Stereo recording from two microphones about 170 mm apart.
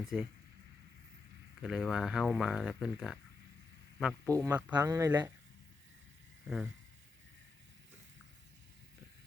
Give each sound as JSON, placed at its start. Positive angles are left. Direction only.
{"t": 0.0, "sound": "speech", "side_deg": 0}
{"t": 1.6, "sound": "speech", "side_deg": -5}
{"t": 4.3, "sound": "speech", "side_deg": -20}